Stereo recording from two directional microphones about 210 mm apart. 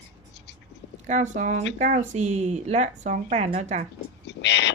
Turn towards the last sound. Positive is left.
turn(degrees=55)  # may be behind; listen again after turning